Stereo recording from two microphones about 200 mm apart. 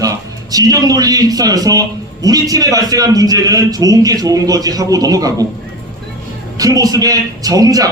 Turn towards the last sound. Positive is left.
turn(degrees=-15)  # may be behind; listen again after turning